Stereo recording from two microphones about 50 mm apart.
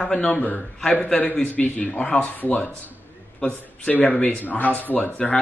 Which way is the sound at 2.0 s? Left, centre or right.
Left.